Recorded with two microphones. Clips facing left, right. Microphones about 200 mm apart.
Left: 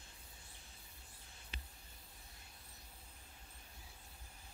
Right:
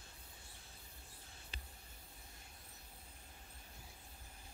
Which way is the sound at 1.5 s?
35° right (ahead or behind).